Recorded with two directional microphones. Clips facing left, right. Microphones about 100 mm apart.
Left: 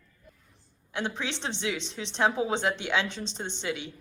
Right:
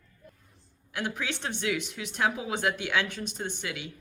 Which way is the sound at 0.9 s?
25° left (ahead or behind).